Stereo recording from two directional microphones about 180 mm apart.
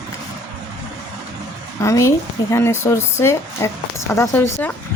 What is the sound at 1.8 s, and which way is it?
A woman's voice, 15° left (ahead or behind).